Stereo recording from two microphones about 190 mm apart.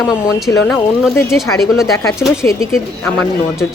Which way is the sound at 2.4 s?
15° left (ahead or behind).